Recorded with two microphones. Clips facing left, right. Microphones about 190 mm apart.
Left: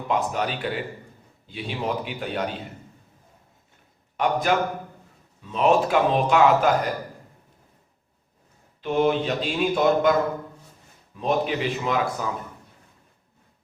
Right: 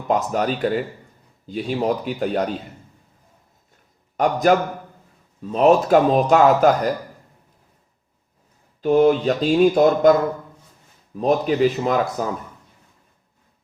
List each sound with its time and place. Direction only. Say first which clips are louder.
0.1 s speech: right 5 dB; 40° right (ahead or behind)
4.2 s speech: right 5 dB; 40° right (ahead or behind)
8.8 s speech: right 6 dB; 40° right (ahead or behind)
11.1 s a man's voice: right 5 dB; 40° right (ahead or behind)